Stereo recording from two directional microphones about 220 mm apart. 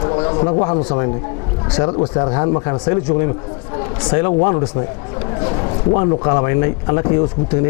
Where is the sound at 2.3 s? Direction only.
25° left (ahead or behind).